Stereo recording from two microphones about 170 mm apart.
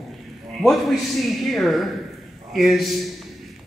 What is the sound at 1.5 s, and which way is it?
Speech, centre (ahead or behind).